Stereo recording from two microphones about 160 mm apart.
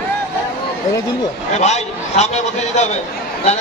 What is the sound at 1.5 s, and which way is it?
A man's voice, 45° left (ahead or behind).